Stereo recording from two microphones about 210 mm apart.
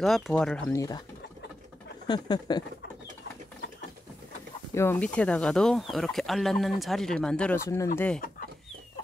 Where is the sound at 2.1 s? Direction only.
20° left (ahead or behind).